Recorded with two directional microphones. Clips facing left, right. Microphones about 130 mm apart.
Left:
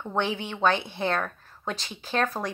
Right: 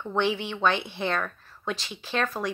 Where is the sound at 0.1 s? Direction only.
45° left (ahead or behind).